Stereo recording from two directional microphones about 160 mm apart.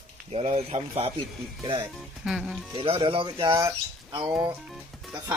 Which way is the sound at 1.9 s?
Centre (ahead or behind).